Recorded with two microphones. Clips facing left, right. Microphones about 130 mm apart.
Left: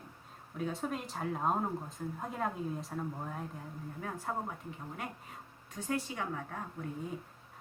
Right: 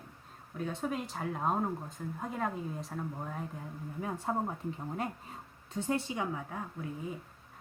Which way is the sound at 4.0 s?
15° right (ahead or behind).